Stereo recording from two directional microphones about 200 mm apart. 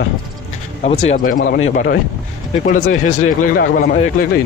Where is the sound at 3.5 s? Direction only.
50° left (ahead or behind).